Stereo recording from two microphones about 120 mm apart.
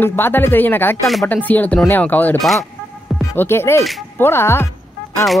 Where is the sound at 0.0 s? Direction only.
15° left (ahead or behind).